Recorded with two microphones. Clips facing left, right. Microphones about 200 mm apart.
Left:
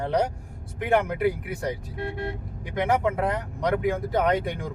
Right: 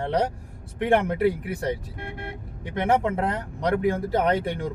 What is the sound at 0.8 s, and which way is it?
Speech, 30° right (ahead or behind).